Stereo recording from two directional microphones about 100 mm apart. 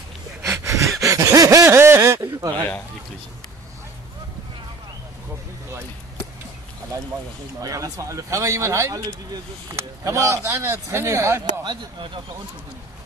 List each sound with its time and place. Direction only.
0.4 s a sound: 30° right (ahead or behind)
7.6 s speech: 35° right (ahead or behind)
11.6 s speech: 55° right (ahead or behind)